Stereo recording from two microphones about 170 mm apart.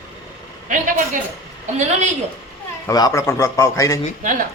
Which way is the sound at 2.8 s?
20° left (ahead or behind).